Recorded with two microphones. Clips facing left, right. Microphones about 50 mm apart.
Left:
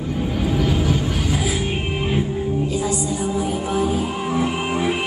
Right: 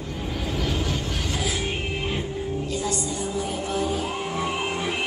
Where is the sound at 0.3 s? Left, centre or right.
Centre.